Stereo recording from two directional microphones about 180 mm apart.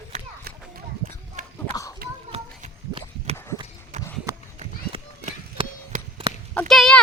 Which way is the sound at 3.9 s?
40° right (ahead or behind).